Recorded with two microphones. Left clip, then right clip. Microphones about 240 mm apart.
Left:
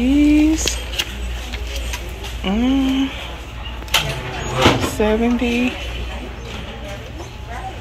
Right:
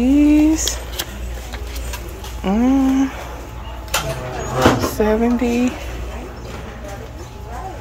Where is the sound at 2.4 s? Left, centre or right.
Centre.